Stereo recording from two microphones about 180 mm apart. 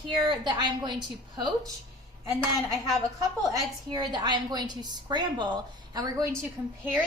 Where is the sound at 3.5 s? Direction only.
25° right (ahead or behind).